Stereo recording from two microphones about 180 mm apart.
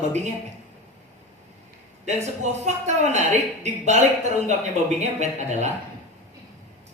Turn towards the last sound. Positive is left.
turn(degrees=-40)  # may be behind; listen again after turning